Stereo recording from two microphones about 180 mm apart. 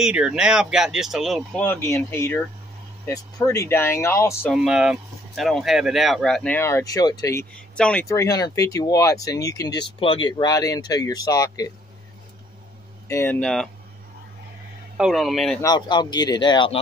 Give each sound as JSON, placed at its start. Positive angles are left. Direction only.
{"t": 0.0, "sound": "speech", "side_deg": -5}
{"t": 1.6, "sound": "speech", "side_deg": 10}
{"t": 4.6, "sound": "speech", "side_deg": -5}
{"t": 7.7, "sound": "speech", "side_deg": 5}
{"t": 8.2, "sound": "speech", "side_deg": 20}
{"t": 13.1, "sound": "speech", "side_deg": 10}
{"t": 15.0, "sound": "speech", "side_deg": 0}
{"t": 15.6, "sound": "speech", "side_deg": 25}